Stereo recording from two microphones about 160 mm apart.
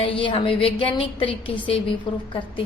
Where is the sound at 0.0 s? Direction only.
35° left (ahead or behind).